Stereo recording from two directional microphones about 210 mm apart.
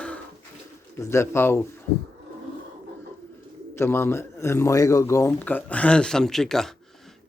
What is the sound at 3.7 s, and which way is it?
Speech, 10° left (ahead or behind).